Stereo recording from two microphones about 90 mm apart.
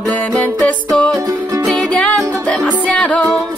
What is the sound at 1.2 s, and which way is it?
Music, 40° right (ahead or behind).